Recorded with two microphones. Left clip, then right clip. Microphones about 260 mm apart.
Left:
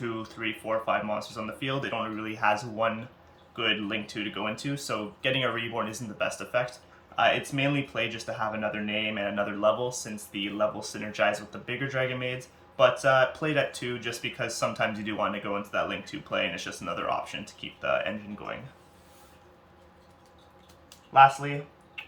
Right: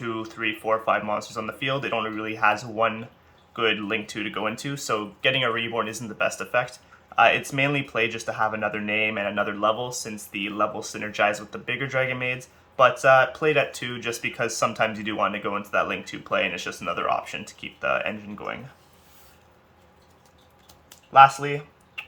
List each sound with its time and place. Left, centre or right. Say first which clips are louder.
0.0 s speech: right 5 dB; centre
21.1 s speech: right 4 dB; right